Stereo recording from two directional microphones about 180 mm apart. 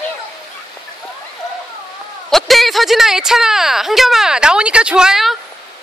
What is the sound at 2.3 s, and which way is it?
Speech, centre (ahead or behind).